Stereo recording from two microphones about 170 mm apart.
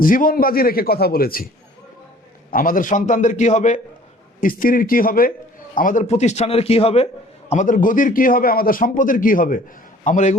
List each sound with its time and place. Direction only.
0.0 s a man's voice: 55° left (ahead or behind)
2.5 s a man's voice: 55° left (ahead or behind)
4.4 s a man's voice: 55° left (ahead or behind); by 7.1 s 35° left (ahead or behind)
7.5 s a man's voice: 50° left (ahead or behind)